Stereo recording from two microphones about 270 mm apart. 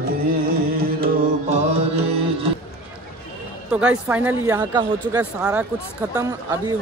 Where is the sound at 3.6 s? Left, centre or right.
Centre.